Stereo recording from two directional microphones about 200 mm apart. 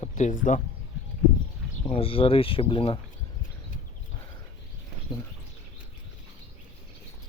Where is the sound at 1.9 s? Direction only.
30° left (ahead or behind).